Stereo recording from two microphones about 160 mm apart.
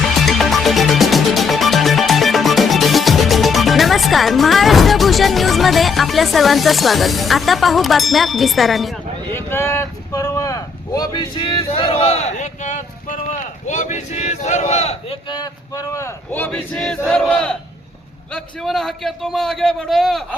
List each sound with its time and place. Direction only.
0.3 s music: centre (ahead or behind)
9.3 s speech: 15° left (ahead or behind); by 15.2 s 40° left (ahead or behind)
15.3 s a man's voice: 25° left (ahead or behind); by 20.2 s centre (ahead or behind)